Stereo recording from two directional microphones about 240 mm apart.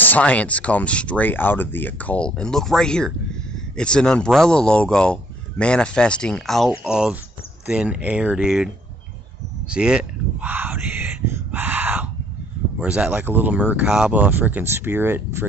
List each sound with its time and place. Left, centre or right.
0.0 s speech: centre
9.7 s speech: centre
11.2 s a sound: centre
12.7 s speech: centre